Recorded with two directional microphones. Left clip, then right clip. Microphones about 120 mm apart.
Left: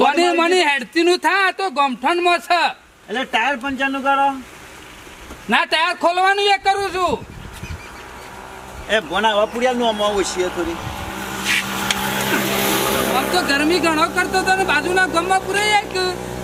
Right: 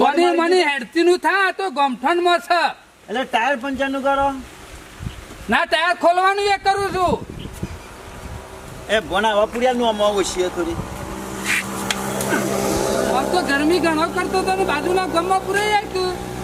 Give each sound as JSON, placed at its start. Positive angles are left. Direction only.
{"t": 0.0, "sound": "speech", "side_deg": 10}
{"t": 5.5, "sound": "a man's voice", "side_deg": 5}
{"t": 8.9, "sound": "speech", "side_deg": -10}
{"t": 11.2, "sound": "vehicle", "side_deg": 25}
{"t": 12.4, "sound": "music", "side_deg": 30}
{"t": 13.3, "sound": "speech", "side_deg": 10}